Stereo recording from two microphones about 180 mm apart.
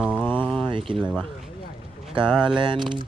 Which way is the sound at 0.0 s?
5° right (ahead or behind).